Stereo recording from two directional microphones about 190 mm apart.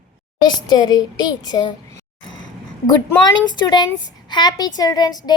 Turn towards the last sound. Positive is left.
turn(degrees=20)  # may be behind; listen again after turning